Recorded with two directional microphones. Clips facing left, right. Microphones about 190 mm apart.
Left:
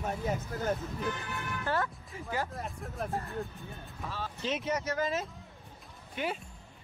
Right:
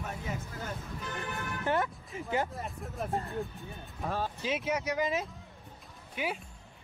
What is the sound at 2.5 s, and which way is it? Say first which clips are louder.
Speech: even; centre (ahead or behind).